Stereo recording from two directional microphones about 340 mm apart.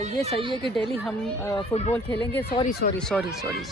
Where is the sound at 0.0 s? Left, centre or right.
Centre.